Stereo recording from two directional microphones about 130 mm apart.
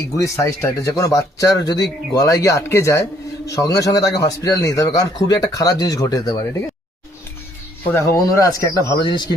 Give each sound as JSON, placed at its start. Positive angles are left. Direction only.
{"t": 0.2, "sound": "a man's voice", "side_deg": 20}
{"t": 7.9, "sound": "a man's voice", "side_deg": 20}
{"t": 9.0, "sound": "speech", "side_deg": 40}